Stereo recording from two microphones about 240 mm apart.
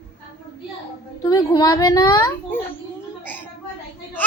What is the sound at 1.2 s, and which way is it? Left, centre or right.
A child's voice, centre.